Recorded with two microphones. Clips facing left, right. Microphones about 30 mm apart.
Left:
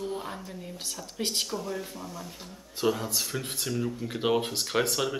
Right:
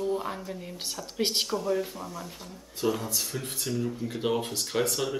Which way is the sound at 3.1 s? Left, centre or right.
Left.